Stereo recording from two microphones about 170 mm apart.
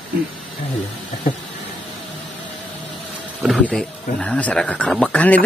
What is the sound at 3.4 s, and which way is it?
Speech, centre (ahead or behind).